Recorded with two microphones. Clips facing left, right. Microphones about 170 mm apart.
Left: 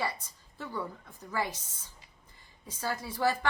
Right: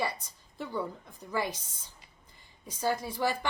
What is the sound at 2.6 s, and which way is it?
Speech, 15° right (ahead or behind).